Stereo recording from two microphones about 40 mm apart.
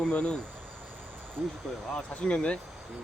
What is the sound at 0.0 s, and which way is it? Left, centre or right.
Speech, left.